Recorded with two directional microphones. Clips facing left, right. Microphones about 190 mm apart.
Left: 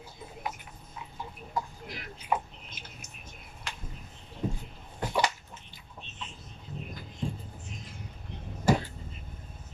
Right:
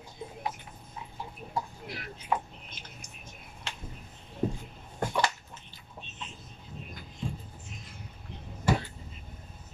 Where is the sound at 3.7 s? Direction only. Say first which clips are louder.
Even; 25° right (ahead or behind).